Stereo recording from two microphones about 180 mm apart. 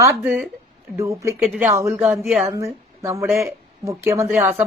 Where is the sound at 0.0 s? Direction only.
10° right (ahead or behind).